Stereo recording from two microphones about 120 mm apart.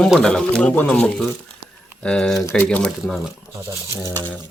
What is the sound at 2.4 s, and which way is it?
Speech, 20° left (ahead or behind).